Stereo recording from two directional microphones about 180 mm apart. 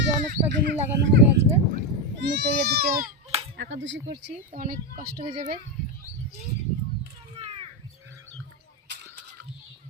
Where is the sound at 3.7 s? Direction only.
90° right.